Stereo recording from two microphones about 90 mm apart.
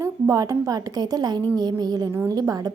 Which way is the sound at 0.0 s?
40° right (ahead or behind).